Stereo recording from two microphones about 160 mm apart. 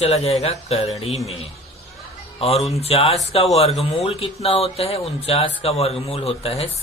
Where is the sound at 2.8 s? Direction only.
40° left (ahead or behind).